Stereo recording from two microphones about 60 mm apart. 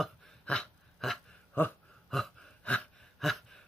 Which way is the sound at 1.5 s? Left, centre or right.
Left.